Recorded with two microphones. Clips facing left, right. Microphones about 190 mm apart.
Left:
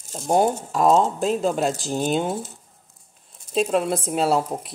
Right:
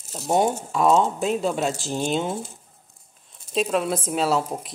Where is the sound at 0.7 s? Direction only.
40° left (ahead or behind).